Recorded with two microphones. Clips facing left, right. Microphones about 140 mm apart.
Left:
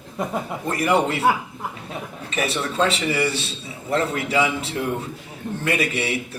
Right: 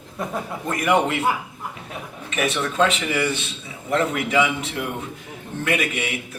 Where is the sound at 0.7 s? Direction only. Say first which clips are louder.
Even; 35° left (ahead or behind).